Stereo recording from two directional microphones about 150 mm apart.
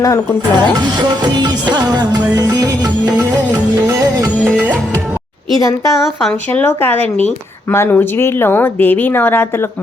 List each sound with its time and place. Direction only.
0.0 s speech: 20° left (ahead or behind)
0.5 s music: 30° right (ahead or behind)
5.5 s speech: 20° left (ahead or behind)
6.5 s a woman's voice: 10° left (ahead or behind)